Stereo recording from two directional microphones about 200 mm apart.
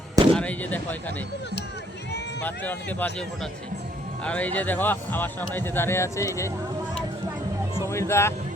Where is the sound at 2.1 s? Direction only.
60° left (ahead or behind).